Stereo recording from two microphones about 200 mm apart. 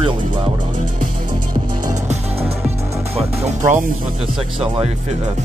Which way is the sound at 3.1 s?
35° right (ahead or behind).